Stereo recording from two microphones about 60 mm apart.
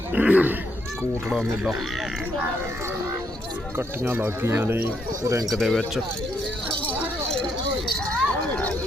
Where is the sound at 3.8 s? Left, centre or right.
Right.